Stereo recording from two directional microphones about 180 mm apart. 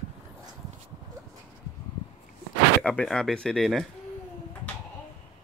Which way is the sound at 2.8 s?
5° left (ahead or behind).